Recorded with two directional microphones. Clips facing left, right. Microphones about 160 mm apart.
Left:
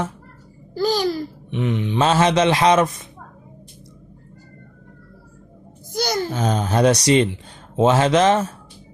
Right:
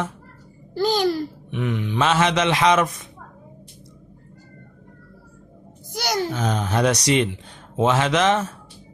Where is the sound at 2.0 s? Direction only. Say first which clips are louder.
Left 3 dB; 35° left (ahead or behind).